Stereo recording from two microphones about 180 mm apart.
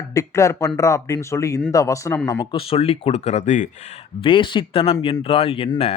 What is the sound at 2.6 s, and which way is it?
Speech, 30° left (ahead or behind).